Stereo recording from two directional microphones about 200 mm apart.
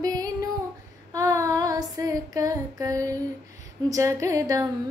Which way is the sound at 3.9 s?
15° right (ahead or behind).